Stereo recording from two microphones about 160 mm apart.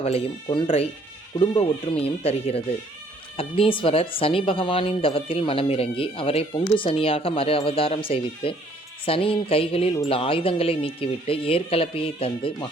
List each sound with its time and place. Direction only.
0.0 s speech: 40° left (ahead or behind)